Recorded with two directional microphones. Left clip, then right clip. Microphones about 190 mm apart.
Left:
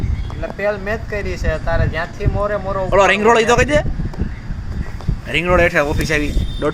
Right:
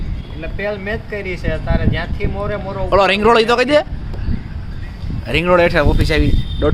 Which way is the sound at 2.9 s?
25° right (ahead or behind).